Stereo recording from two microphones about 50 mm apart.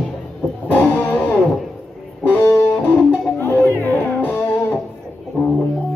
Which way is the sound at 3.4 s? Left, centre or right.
Left.